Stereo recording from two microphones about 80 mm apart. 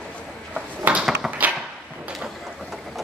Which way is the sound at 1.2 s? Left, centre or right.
Centre.